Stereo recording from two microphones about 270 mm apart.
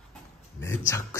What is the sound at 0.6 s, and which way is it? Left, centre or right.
Speech, centre.